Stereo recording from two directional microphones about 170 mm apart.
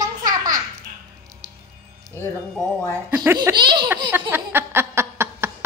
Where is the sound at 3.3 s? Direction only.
25° right (ahead or behind).